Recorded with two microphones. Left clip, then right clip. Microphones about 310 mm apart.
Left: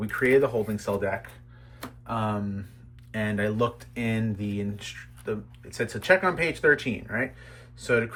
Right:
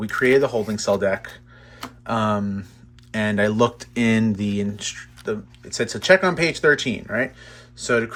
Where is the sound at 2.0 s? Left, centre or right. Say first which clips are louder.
Right 8 dB; centre.